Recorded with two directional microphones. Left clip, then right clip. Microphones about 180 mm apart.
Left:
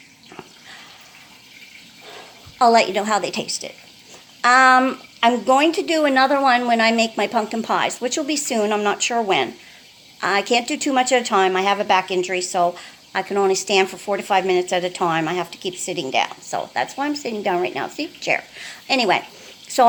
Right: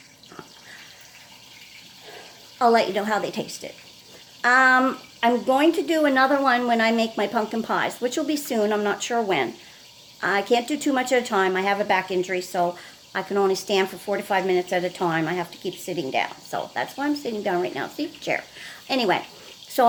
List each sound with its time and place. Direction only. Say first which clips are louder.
2.6 s a woman's voice: left 4 dB; 5° left (ahead or behind)